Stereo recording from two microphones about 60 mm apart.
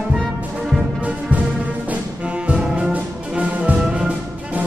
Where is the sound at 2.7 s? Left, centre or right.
Right.